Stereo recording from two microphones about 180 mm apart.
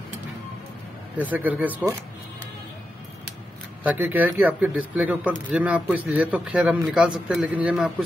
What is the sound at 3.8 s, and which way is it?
A man's voice, 10° right (ahead or behind).